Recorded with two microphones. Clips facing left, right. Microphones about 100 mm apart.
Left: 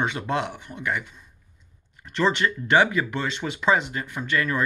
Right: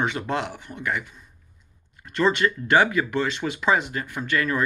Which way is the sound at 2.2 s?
25° left (ahead or behind).